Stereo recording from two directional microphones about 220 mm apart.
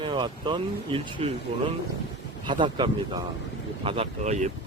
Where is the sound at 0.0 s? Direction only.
20° right (ahead or behind).